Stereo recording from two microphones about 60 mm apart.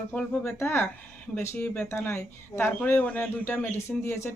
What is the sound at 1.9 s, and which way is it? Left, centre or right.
Speech, left.